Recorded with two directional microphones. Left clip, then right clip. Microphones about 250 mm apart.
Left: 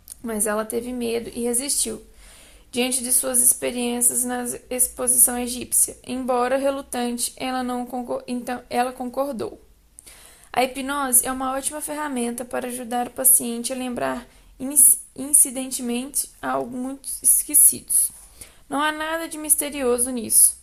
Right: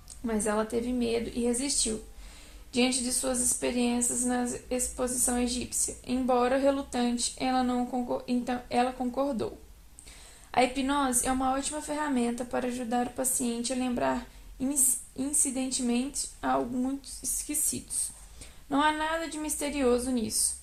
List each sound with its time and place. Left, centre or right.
0.3 s a woman's voice: left
10.5 s a woman's voice: left